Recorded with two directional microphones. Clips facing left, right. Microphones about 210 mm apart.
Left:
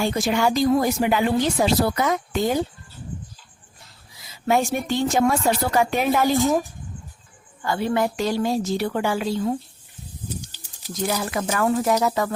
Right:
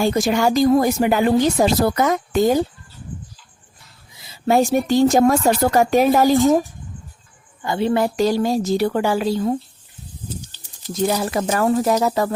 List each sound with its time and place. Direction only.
0.0 s speech: 45° right (ahead or behind)
4.2 s a woman's voice: 30° right (ahead or behind)
7.6 s a woman's voice: 20° right (ahead or behind); by 9.6 s 40° right (ahead or behind)
10.2 s snake: 15° left (ahead or behind)
11.0 s a woman's voice: 30° right (ahead or behind)